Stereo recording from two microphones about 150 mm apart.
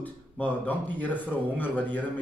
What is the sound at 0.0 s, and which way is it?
Speech, 10° left (ahead or behind).